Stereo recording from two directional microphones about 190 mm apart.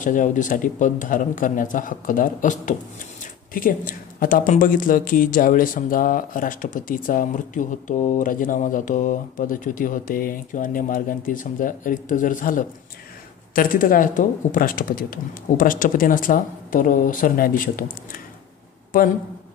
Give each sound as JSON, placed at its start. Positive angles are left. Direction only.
{"t": 0.0, "sound": "speech", "side_deg": 45}